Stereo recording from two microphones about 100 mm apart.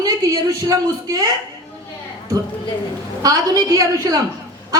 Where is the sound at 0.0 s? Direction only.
35° right (ahead or behind).